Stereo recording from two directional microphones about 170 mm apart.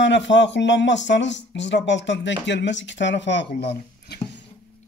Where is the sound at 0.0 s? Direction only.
90° left.